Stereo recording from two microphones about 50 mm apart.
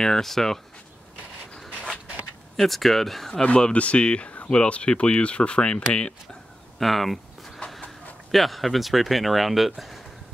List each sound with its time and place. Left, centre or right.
0.0 s speech: centre
2.5 s speech: centre
3.4 s speech: left
6.8 s a sound: centre
8.3 s speech: centre